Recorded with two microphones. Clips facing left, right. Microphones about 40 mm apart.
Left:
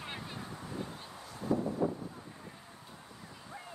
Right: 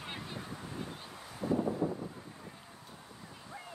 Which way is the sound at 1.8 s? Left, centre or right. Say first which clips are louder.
Left 1 dB; left.